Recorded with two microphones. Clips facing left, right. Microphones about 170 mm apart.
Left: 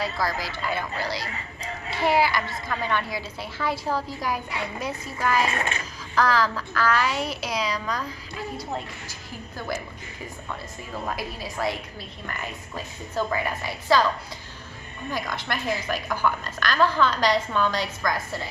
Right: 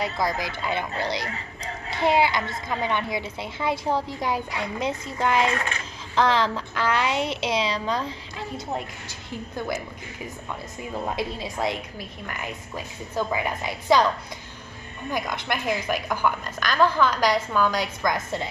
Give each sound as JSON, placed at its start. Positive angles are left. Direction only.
{"t": 0.0, "sound": "a woman's voice", "side_deg": -20}
{"t": 1.9, "sound": "child singing", "side_deg": -20}
{"t": 2.7, "sound": "a woman's voice", "side_deg": -20}
{"t": 11.1, "sound": "a woman's voice", "side_deg": -20}
{"t": 15.0, "sound": "a woman's voice", "side_deg": -15}